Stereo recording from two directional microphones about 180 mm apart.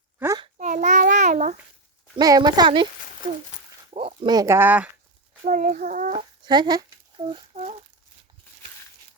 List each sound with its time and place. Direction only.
0.5 s child singing: 45° right (ahead or behind)
2.1 s speech: 20° right (ahead or behind)
3.9 s speech: 30° right (ahead or behind); by 4.9 s 10° right (ahead or behind)
5.5 s a child's voice: 45° right (ahead or behind)
6.1 s a sound: 25° right (ahead or behind)